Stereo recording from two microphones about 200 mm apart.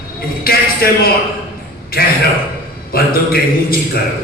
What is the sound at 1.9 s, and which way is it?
A man's voice, 50° left (ahead or behind).